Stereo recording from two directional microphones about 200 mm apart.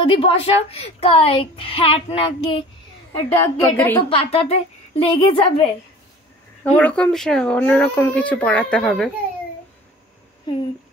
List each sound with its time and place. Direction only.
0.0 s a woman's voice: 30° left (ahead or behind)
3.3 s a woman's voice: 10° left (ahead or behind)
4.1 s a woman's voice: 30° left (ahead or behind)
6.6 s speech: 5° left (ahead or behind)